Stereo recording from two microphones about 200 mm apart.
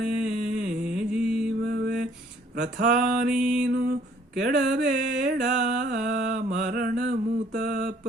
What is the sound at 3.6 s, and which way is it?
Mantra, 50° right (ahead or behind).